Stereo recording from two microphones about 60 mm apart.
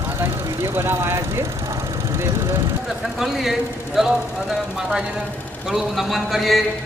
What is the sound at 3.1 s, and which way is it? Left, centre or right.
Speech, centre.